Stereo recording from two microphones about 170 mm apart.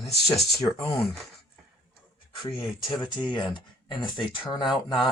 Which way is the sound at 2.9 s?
25° left (ahead or behind).